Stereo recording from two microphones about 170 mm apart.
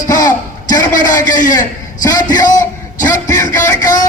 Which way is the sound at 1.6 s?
20° left (ahead or behind).